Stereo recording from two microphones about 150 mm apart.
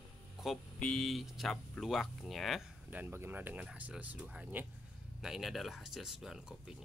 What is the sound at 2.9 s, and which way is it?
Speech, 15° right (ahead or behind).